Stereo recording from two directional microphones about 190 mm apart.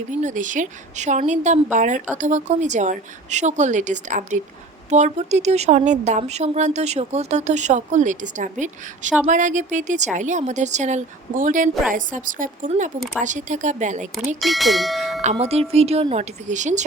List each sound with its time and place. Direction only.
0.1 s a woman's voice: 40° right (ahead or behind)
14.4 s speech: centre (ahead or behind)
15.2 s a woman's voice: 35° right (ahead or behind)